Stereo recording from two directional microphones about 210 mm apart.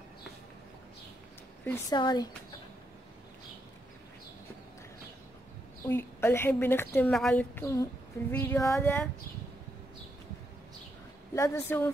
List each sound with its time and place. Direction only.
1.6 s a woman's voice: 10° left (ahead or behind)
2.0 s speech: 20° left (ahead or behind)
5.9 s a woman's voice: 10° left (ahead or behind)
11.3 s a woman's voice: 15° left (ahead or behind)